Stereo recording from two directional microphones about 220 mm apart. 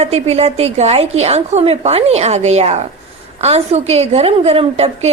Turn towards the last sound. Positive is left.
turn(degrees=-25)  # may be behind; listen again after turning